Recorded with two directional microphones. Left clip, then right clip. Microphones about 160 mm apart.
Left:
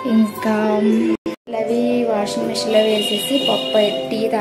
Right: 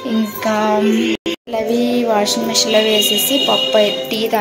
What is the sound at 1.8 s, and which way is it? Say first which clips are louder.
Speech: right 3 dB; 25° right (ahead or behind).